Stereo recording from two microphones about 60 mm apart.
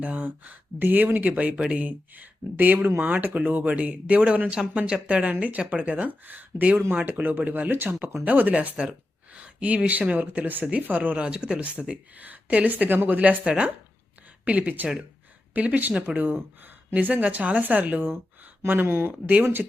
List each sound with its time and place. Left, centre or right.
0.0 s speech: right
1.5 s speech: centre
1.8 s speech: right
8.7 s speech: centre
13.4 s speech: centre; by 19.1 s right